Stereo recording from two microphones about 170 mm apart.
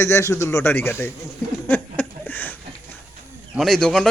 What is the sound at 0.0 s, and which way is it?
A man's voice, 15° left (ahead or behind).